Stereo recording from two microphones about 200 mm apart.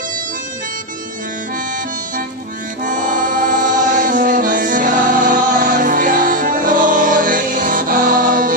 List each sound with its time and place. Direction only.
2.8 s music: 40° right (ahead or behind)